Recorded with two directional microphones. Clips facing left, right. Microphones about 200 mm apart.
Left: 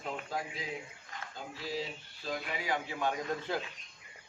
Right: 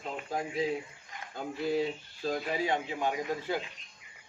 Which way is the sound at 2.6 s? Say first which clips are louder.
Right 3 dB; 20° right (ahead or behind).